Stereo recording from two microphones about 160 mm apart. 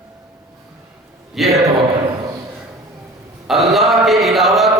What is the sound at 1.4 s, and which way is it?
Speech, centre (ahead or behind).